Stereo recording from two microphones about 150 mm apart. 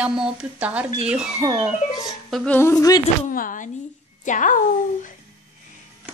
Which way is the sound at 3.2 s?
65° left (ahead or behind).